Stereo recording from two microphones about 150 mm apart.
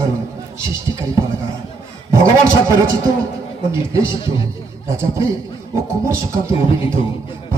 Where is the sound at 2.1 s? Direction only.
20° right (ahead or behind).